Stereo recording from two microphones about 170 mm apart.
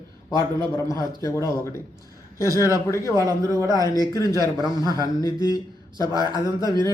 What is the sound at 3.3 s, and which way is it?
Speech, 20° right (ahead or behind).